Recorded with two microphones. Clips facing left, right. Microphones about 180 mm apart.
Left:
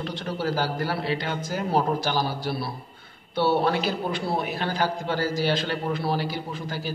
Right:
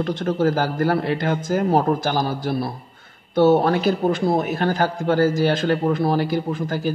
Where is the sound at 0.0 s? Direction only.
45° right (ahead or behind).